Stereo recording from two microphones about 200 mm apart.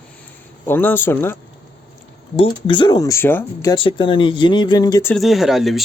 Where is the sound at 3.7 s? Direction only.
25° left (ahead or behind).